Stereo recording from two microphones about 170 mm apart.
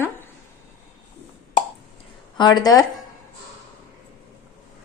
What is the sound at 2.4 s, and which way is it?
Speech, 25° left (ahead or behind).